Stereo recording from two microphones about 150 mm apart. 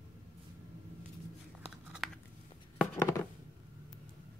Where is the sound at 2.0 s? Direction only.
Centre (ahead or behind).